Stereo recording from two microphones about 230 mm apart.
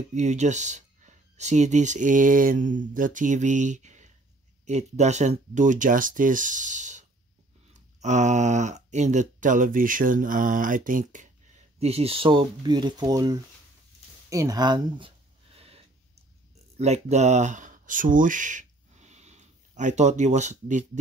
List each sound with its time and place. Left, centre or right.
0.1 s speech: right
14.3 s a sound: centre
16.7 s speech: right